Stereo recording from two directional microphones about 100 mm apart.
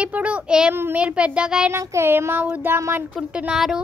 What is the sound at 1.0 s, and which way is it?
Speech, 10° right (ahead or behind).